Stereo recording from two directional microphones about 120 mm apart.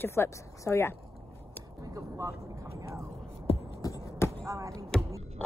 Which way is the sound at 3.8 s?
30° left (ahead or behind).